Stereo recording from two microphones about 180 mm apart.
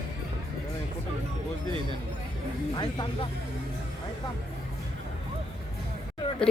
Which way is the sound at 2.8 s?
25° left (ahead or behind).